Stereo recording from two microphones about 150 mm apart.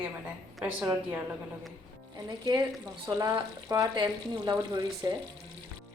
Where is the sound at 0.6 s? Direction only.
15° right (ahead or behind).